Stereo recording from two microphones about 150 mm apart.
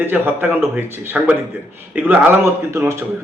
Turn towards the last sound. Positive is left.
turn(degrees=-20)  # may be behind; listen again after turning